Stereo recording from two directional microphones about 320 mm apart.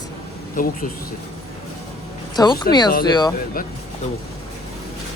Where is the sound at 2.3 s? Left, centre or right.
Centre.